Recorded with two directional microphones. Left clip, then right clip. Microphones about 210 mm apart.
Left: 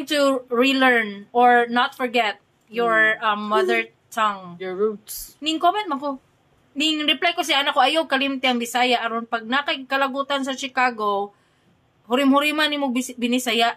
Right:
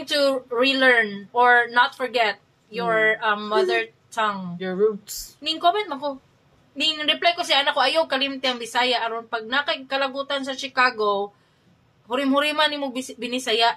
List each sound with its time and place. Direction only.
0.0 s speech: 55° left (ahead or behind)
4.6 s speech: centre (ahead or behind)
5.4 s a woman's voice: 55° left (ahead or behind)